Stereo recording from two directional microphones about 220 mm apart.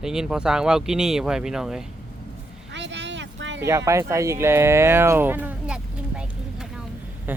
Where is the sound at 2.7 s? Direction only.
55° right (ahead or behind).